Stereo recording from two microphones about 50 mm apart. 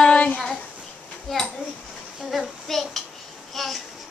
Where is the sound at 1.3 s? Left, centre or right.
Centre.